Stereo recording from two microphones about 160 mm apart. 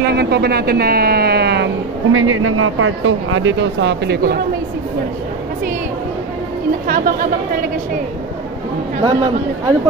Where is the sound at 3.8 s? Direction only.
85° right.